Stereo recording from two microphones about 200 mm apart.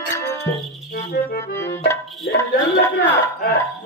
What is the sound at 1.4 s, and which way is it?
Accordion, 15° left (ahead or behind).